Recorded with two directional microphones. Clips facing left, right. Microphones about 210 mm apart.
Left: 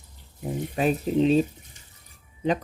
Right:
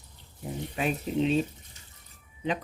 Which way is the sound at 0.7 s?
40° left (ahead or behind).